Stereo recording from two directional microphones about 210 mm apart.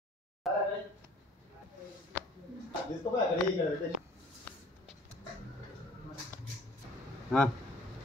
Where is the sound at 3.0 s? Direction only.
15° left (ahead or behind).